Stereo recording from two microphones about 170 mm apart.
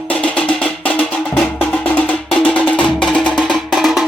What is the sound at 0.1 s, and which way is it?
Music, 5° left (ahead or behind).